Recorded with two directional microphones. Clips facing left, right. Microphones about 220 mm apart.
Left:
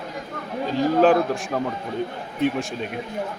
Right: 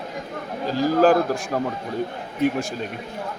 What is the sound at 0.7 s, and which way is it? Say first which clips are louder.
A man's voice: even; centre (ahead or behind).